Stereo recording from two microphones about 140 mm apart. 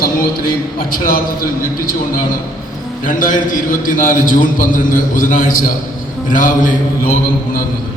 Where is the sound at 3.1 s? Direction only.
75° left (ahead or behind).